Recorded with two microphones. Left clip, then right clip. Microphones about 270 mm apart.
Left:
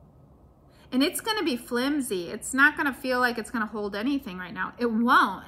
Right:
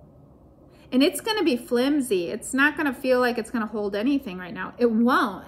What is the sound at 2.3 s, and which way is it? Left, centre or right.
Speech, centre.